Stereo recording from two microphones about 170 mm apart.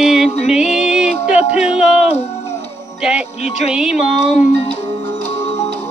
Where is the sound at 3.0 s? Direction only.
5° right (ahead or behind).